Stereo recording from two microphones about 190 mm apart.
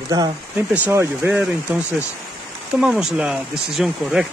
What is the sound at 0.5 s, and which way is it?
Speech, 10° right (ahead or behind).